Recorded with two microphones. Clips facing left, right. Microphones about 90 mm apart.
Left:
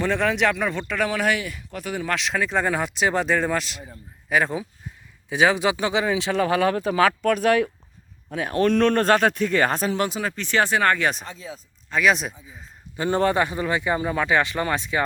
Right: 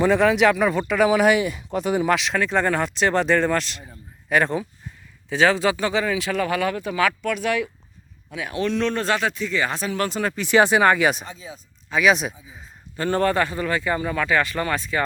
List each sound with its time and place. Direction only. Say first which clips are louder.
0.0 s speech: right 5 dB; 5° right (ahead or behind)
2.1 s speech: right 2 dB; centre (ahead or behind)
5.3 s speech: right 1 dB; 15° left (ahead or behind); by 9.9 s 45° left (ahead or behind)
10.1 s speech: right 3 dB; 5° left (ahead or behind)
10.3 s speech: right 6 dB; 15° right (ahead or behind)
13.0 s speech: even; 20° left (ahead or behind)